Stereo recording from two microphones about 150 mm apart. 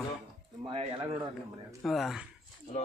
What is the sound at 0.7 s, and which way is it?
Speech, 40° right (ahead or behind).